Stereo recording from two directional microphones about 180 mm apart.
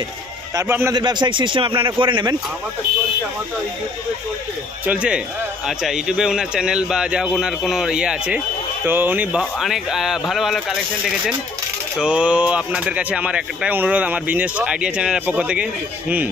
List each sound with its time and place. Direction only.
0.6 s speech: 15° right (ahead or behind)
0.9 s a man's voice: 25° right (ahead or behind)
4.8 s a man's voice: 5° right (ahead or behind)